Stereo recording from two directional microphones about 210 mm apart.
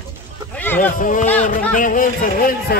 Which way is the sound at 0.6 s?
10° left (ahead or behind).